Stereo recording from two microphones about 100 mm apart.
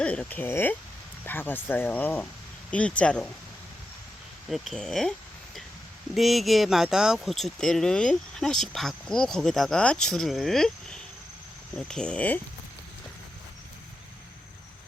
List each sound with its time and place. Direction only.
0.0 s speech: 10° left (ahead or behind)
4.4 s speech: centre (ahead or behind)
6.1 s speech: centre (ahead or behind)